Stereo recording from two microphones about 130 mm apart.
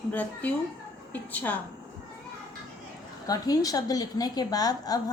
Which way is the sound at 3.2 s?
30° left (ahead or behind).